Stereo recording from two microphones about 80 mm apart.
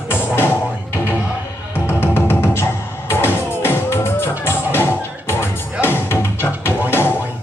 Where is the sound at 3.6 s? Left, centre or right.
Left.